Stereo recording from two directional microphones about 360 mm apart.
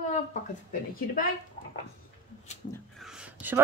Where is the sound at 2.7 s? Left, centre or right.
Centre.